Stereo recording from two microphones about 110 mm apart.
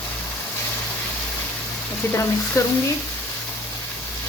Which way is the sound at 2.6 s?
30° left (ahead or behind).